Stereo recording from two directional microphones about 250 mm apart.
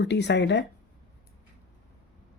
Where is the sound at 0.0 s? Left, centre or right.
Left.